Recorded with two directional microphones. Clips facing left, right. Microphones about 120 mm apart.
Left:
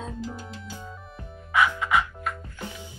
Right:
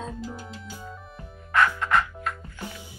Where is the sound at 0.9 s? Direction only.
Centre (ahead or behind).